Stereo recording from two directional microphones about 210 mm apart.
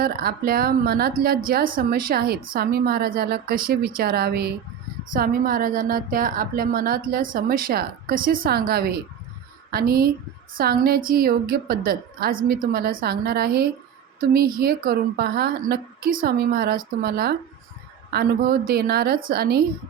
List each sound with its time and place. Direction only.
0.0 s a woman's voice: 45° right (ahead or behind)